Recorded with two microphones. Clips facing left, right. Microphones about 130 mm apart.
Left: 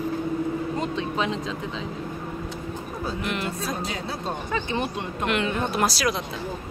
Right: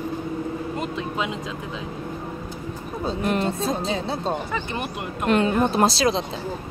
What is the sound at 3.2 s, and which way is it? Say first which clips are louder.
Speech: right 7 dB; 40° right (ahead or behind).